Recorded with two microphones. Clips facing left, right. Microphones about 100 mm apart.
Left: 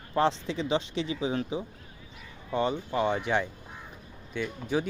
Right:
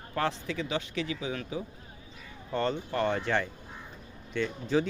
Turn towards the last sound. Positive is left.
turn(degrees=10)  # may be behind; listen again after turning